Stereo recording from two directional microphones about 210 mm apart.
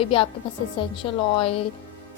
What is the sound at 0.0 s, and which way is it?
A woman's voice, 25° left (ahead or behind).